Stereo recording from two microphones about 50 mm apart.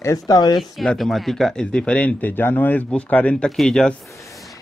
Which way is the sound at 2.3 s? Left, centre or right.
Left.